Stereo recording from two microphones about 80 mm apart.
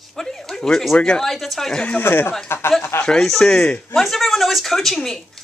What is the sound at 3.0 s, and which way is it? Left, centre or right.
Speech, centre.